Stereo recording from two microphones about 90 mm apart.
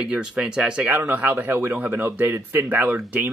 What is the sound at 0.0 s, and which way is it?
Speech, 10° right (ahead or behind).